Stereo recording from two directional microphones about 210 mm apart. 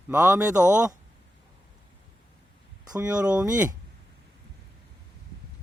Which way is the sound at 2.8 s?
15° right (ahead or behind).